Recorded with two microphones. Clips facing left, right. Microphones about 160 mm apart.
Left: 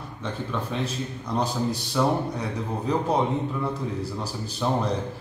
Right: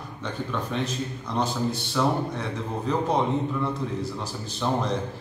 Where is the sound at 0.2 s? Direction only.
5° left (ahead or behind).